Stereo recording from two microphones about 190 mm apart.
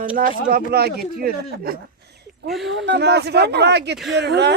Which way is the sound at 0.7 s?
55° right (ahead or behind).